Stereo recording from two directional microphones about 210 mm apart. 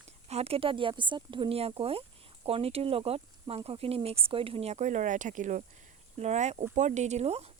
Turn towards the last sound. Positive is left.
turn(degrees=-30)  # may be behind; listen again after turning